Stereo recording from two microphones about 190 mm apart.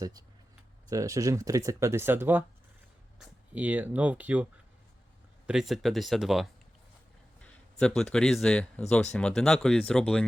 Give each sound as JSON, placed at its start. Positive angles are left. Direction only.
{"t": 0.0, "sound": "speech", "side_deg": -20}
{"t": 5.5, "sound": "speech", "side_deg": 0}